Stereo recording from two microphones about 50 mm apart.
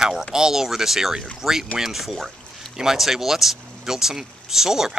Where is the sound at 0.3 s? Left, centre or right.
Centre.